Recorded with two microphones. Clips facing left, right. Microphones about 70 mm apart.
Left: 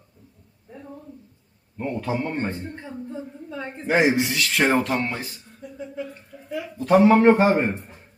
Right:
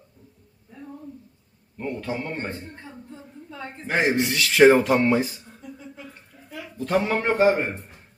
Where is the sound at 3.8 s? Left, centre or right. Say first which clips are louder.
Left 3 dB; centre.